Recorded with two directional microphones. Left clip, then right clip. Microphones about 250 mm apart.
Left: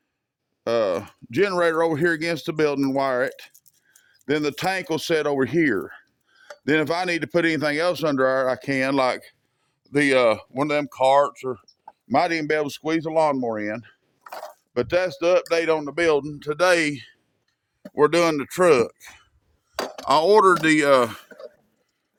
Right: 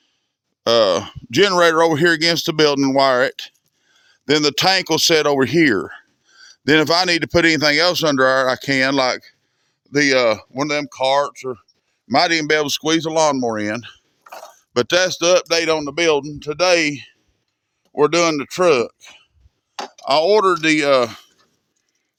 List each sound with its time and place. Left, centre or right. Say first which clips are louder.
0.6 s speech: right 7 dB; right; by 11.6 s centre
12.0 s speech: right 5 dB; right
14.3 s a sound: even; centre
14.7 s speech: right 6 dB; right
16.2 s speech: right 2 dB; right